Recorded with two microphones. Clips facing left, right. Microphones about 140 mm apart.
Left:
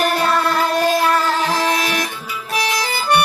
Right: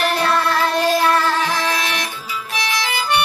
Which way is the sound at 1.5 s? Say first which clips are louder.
Left 3 dB; 40° left (ahead or behind).